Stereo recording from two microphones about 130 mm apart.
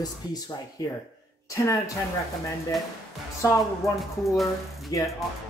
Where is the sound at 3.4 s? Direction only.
25° left (ahead or behind).